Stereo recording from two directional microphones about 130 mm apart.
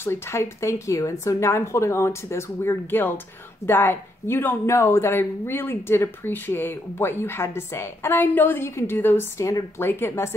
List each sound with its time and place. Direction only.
0.0 s speech: 20° left (ahead or behind)